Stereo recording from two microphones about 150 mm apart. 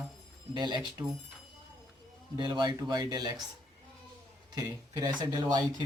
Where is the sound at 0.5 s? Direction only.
30° right (ahead or behind).